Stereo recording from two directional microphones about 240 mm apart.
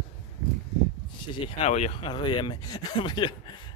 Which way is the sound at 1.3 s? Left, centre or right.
Left.